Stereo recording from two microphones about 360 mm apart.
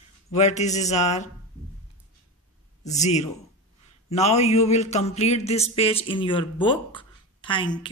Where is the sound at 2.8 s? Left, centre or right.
Centre.